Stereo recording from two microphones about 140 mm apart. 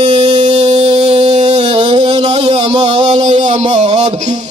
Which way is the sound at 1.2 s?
55° right (ahead or behind).